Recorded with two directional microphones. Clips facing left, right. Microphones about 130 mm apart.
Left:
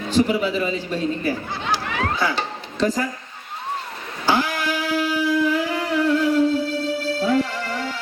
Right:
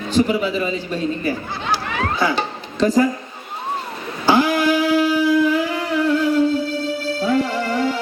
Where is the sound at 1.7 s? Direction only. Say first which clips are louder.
Right 2 dB; 40° right (ahead or behind).